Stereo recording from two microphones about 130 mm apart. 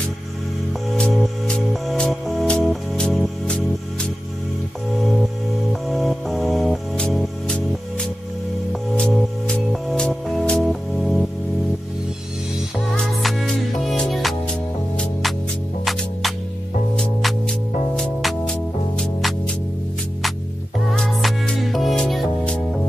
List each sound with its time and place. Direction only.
0.9 s music: 5° left (ahead or behind)
5.7 s music: centre (ahead or behind)
12.7 s music: 5° left (ahead or behind)
20.9 s music: 5° left (ahead or behind)